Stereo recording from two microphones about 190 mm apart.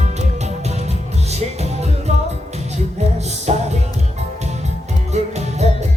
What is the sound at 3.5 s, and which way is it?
Music, 35° right (ahead or behind).